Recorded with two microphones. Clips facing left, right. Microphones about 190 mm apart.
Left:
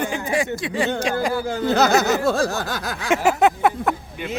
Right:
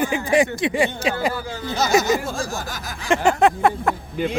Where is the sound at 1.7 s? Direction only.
65° left (ahead or behind).